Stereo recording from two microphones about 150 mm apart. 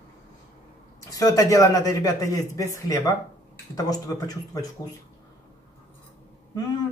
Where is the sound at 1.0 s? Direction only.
25° left (ahead or behind).